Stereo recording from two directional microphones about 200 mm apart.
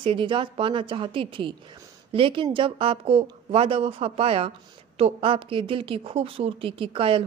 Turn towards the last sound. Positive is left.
turn(degrees=-25)  # may be behind; listen again after turning